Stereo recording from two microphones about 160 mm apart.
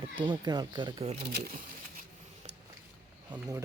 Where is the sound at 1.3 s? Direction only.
70° right (ahead or behind).